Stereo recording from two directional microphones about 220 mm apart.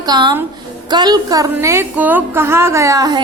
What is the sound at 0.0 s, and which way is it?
A woman's voice, 20° right (ahead or behind).